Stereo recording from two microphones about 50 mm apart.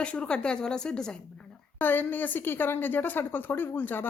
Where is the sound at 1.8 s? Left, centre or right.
Left.